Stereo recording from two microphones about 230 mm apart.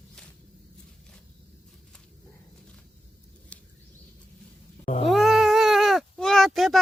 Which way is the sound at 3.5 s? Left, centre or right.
Centre.